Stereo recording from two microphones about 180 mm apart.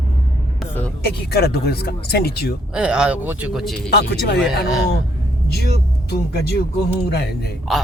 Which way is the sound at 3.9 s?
65° left (ahead or behind).